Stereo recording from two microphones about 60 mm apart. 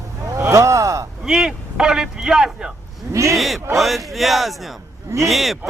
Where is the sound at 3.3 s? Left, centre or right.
Centre.